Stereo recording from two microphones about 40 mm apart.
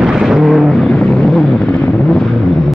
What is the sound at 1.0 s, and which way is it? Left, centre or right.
Vehicle, centre.